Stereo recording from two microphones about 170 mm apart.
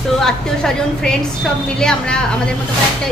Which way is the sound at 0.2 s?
5° left (ahead or behind).